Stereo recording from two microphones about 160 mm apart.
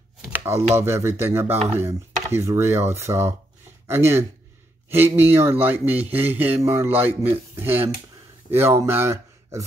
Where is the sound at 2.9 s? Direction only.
15° right (ahead or behind).